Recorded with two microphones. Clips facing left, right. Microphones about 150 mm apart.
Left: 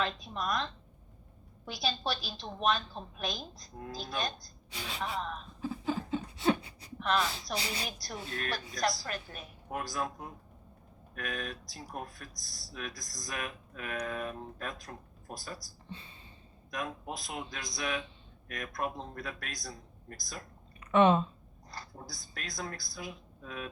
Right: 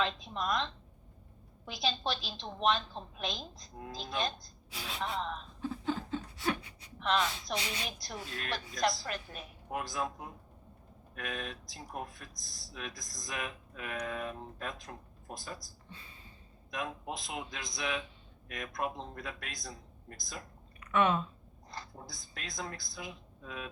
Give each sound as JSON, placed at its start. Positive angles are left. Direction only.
{"t": 0.0, "sound": "speech", "side_deg": -25}
{"t": 1.7, "sound": "speech", "side_deg": -25}
{"t": 4.7, "sound": "speech", "side_deg": 0}
{"t": 5.6, "sound": "a sound", "side_deg": 5}
{"t": 6.4, "sound": "a sound", "side_deg": 30}
{"t": 7.2, "sound": "a woman's voice", "side_deg": 35}
{"t": 7.9, "sound": "speech", "side_deg": -25}
{"t": 15.9, "sound": "a sound", "side_deg": 25}
{"t": 16.7, "sound": "speech", "side_deg": -25}
{"t": 20.8, "sound": "speech", "side_deg": 25}
{"t": 21.7, "sound": "speech", "side_deg": -25}